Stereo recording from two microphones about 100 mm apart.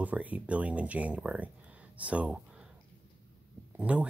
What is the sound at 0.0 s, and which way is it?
Speech, 15° right (ahead or behind).